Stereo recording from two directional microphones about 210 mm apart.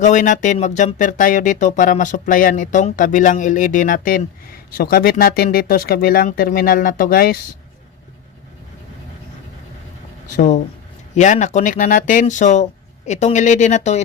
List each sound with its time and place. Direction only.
0.0 s speech: 35° left (ahead or behind)
10.3 s speech: 35° left (ahead or behind)